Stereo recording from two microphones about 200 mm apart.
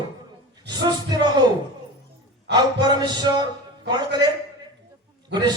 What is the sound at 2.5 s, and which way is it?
Speech, 55° right (ahead or behind).